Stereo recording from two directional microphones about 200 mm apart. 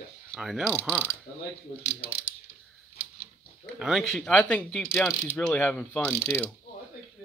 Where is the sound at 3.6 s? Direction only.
Centre (ahead or behind).